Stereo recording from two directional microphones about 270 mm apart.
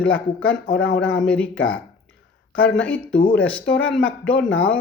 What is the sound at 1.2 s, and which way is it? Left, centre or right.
Speech, centre.